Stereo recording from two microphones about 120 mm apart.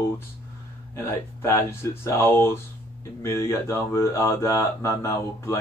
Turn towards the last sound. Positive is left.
turn(degrees=25)  # may be behind; listen again after turning